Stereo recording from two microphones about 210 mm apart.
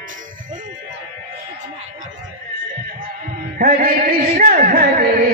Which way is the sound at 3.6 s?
45° right (ahead or behind).